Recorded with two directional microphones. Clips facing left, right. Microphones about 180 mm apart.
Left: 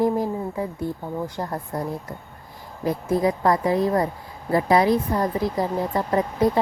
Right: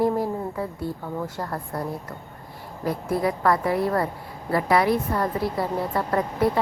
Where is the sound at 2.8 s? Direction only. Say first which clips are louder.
Left 3 dB; 20° left (ahead or behind).